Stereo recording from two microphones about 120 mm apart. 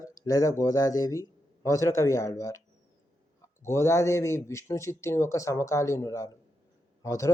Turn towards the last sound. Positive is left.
turn(degrees=30)  # may be behind; listen again after turning